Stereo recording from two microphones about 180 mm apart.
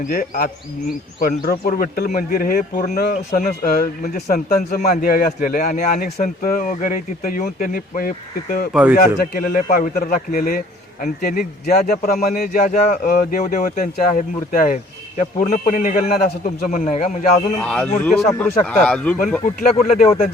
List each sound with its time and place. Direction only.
0.1 s speech: 55° left (ahead or behind)
8.7 s speech: 10° right (ahead or behind)
9.0 s speech: 50° left (ahead or behind)
17.6 s speech: 5° left (ahead or behind)
19.9 s speech: 40° left (ahead or behind)